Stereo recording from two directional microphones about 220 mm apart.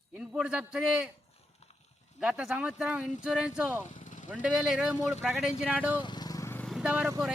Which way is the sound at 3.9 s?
35° left (ahead or behind).